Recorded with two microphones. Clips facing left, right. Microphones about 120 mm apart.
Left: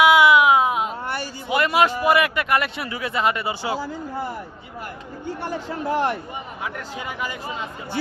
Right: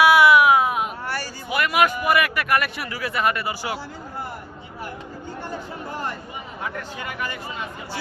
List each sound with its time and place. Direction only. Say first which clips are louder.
0.0 s a sound: even; 15° left (ahead or behind)
5.4 s speech: left 5 dB; 85° left
6.7 s speech: left 1 dB; 15° left (ahead or behind)